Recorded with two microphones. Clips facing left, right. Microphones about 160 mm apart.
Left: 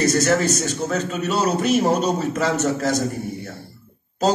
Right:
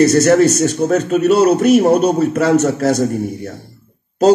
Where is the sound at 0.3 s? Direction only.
40° right (ahead or behind).